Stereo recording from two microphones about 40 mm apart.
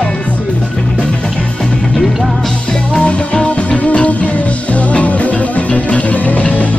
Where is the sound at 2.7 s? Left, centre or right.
Left.